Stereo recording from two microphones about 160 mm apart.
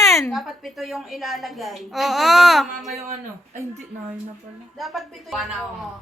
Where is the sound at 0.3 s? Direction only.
Centre (ahead or behind).